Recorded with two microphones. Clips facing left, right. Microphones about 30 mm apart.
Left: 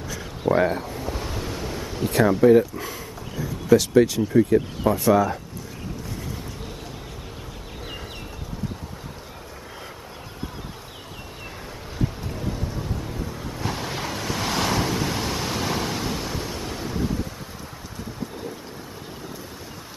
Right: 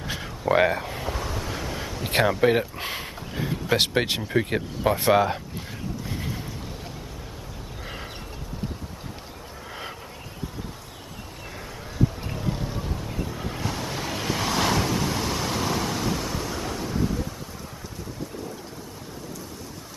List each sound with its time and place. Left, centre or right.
0.5 s speech: right
1.2 s train: centre
1.5 s vehicle: centre
2.2 s speech: right
2.8 s a sound: right
4.8 s speech: right
12.4 s music: right
13.7 s waves: centre
14.1 s waves: centre
16.8 s wind: centre